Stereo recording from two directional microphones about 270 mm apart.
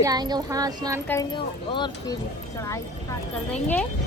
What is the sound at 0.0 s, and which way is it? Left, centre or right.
Speech, centre.